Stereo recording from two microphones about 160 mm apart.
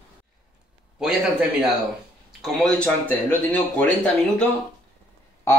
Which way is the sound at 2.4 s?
5° left (ahead or behind).